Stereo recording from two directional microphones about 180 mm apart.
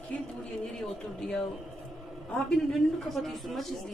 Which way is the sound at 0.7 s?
5° left (ahead or behind).